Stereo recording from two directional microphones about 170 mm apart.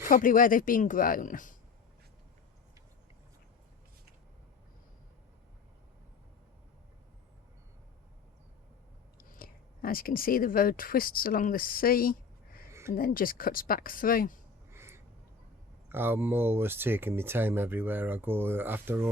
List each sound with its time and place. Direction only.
0.1 s speech: 55° left (ahead or behind)
9.1 s speech: 60° left (ahead or behind)
14.7 s a sound: 15° right (ahead or behind)
15.9 s speech: 15° right (ahead or behind)